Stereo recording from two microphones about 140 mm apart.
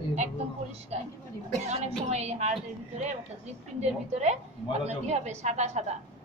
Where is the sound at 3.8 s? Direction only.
55° right (ahead or behind).